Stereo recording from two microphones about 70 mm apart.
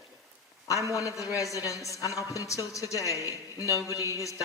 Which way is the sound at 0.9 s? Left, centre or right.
Left.